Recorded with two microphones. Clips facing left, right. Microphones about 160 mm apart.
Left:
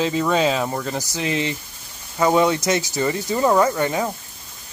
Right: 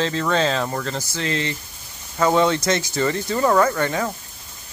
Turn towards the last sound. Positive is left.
turn(degrees=15)  # may be behind; listen again after turning